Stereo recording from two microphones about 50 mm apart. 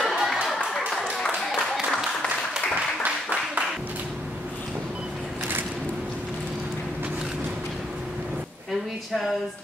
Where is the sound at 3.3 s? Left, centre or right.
Right.